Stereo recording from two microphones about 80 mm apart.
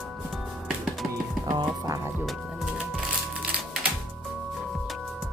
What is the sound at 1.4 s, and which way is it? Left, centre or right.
Music, right.